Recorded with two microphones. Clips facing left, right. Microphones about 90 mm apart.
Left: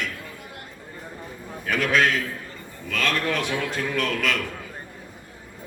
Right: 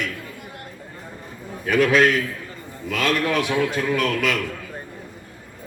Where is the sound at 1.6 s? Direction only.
5° right (ahead or behind).